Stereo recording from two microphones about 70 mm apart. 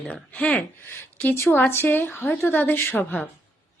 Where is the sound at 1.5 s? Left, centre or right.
Left.